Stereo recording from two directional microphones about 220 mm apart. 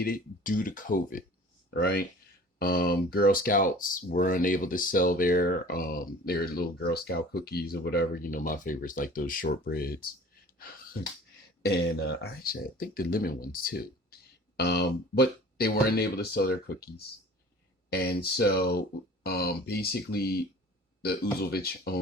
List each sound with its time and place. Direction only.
0.0 s speech: 40° left (ahead or behind)
11.6 s speech: 45° left (ahead or behind)
17.9 s speech: 45° left (ahead or behind)
21.4 s speech: 45° left (ahead or behind)